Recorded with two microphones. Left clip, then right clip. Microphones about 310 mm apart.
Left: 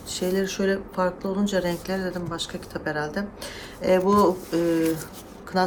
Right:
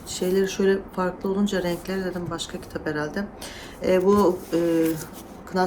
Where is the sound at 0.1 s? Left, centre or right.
Centre.